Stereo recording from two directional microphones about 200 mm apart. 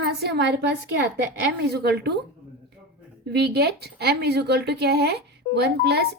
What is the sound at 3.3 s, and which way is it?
Speech, 55° right (ahead or behind).